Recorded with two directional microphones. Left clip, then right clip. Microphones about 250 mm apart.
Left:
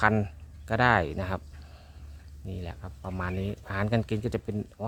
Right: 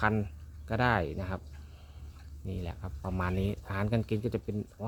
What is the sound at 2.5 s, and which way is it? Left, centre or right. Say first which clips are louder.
Speech: left 1 dB; centre.